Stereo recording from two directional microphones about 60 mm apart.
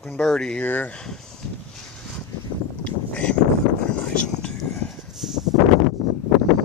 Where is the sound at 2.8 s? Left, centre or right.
Left.